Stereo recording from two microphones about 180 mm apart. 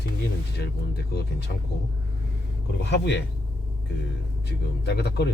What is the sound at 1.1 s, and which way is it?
Speech, 65° left (ahead or behind).